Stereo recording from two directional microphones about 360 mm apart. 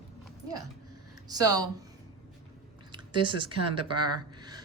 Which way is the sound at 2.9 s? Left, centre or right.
Centre.